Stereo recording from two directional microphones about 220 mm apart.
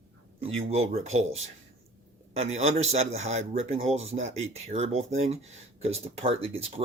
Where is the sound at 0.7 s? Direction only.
30° right (ahead or behind).